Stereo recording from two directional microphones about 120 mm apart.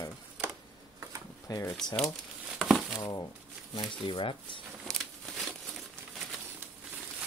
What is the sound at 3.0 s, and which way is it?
Speech, 35° left (ahead or behind).